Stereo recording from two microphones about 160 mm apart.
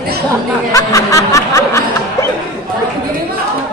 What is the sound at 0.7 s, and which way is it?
Speech, 20° left (ahead or behind).